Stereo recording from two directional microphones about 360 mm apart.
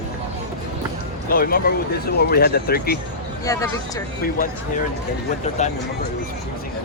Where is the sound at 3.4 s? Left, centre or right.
Centre.